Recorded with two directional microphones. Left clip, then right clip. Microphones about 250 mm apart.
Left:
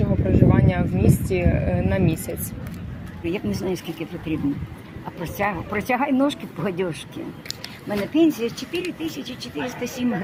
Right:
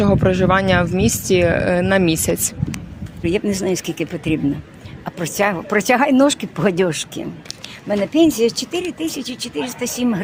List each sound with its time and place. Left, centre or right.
0.0 s speech: right
3.2 s speech: right